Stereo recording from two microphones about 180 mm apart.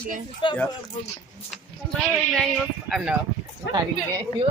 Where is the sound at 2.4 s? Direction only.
Centre (ahead or behind).